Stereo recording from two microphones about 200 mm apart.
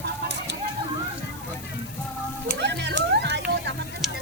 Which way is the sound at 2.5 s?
60° right (ahead or behind).